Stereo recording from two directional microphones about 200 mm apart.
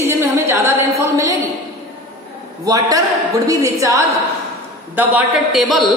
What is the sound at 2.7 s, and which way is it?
A woman's voice, 20° right (ahead or behind).